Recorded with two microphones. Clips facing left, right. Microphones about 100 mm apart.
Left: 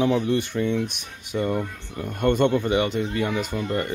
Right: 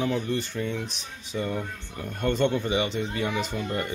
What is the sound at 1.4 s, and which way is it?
Speech, 10° left (ahead or behind).